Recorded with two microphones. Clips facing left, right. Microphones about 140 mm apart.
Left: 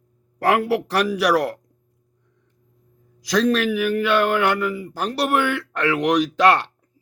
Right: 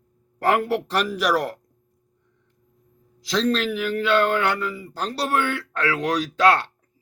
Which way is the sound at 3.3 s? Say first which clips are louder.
Left 3 dB; 15° left (ahead or behind).